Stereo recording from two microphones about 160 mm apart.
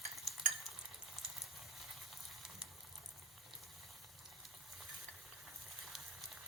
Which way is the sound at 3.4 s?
Centre (ahead or behind).